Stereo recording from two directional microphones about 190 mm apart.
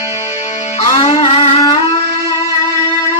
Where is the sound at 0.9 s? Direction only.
30° left (ahead or behind).